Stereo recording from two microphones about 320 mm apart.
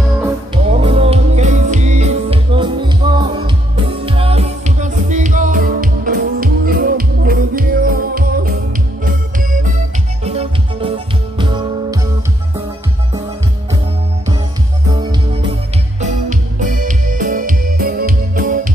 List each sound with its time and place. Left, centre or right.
0.7 s music: centre
16.0 s music: right